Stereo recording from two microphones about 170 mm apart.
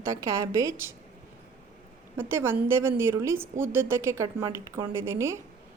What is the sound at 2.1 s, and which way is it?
A woman's voice, 15° right (ahead or behind).